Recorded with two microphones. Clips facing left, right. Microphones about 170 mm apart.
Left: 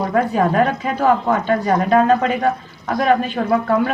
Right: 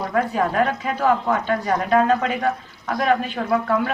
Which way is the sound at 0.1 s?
40° left (ahead or behind).